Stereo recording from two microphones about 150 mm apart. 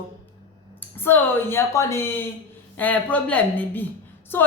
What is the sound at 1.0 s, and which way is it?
A woman's voice, 15° left (ahead or behind).